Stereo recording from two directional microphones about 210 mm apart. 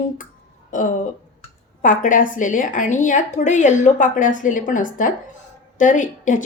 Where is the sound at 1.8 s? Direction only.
40° left (ahead or behind).